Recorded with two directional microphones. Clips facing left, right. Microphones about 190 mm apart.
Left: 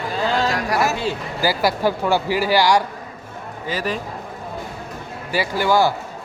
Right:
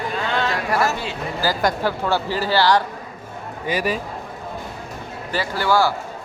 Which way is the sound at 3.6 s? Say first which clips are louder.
Right 2 dB; 15° right (ahead or behind).